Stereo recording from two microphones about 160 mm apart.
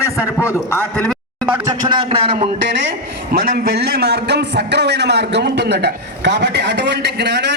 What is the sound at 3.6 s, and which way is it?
A man's voice, 85° right.